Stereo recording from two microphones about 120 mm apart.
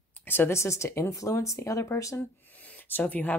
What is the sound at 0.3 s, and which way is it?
Speech, 20° left (ahead or behind).